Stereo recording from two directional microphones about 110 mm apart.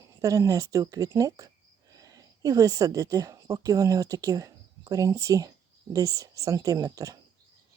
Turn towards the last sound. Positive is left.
turn(degrees=-35)  # may be behind; listen again after turning